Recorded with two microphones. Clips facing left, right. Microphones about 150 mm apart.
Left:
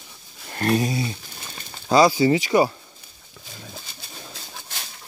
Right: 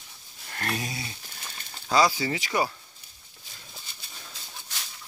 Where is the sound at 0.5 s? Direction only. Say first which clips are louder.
Left 11 dB; 30° left (ahead or behind).